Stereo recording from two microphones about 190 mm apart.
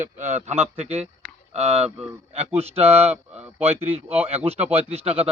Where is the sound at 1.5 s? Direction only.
35° right (ahead or behind).